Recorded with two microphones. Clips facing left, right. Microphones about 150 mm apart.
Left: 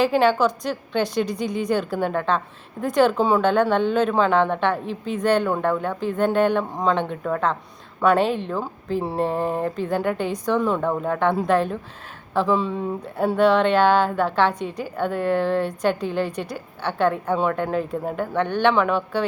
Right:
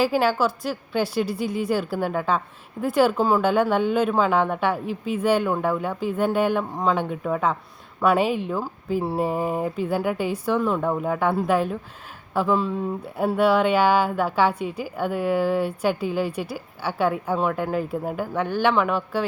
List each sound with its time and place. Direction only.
0.0 s speech: 5° right (ahead or behind)